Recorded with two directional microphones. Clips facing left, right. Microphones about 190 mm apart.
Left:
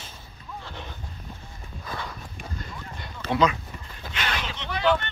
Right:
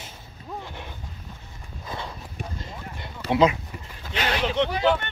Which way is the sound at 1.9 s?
25° right (ahead or behind).